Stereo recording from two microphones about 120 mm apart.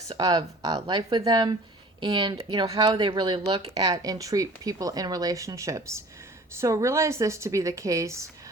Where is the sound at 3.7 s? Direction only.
35° right (ahead or behind).